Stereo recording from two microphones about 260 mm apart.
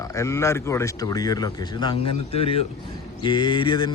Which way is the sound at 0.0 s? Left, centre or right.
Centre.